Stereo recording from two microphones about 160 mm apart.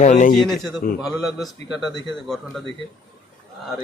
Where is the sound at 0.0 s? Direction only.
50° left (ahead or behind).